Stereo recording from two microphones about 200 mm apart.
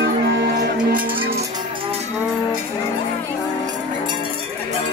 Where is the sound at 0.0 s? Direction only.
60° right (ahead or behind).